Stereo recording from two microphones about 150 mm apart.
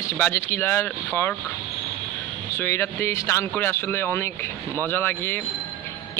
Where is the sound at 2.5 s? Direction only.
15° left (ahead or behind).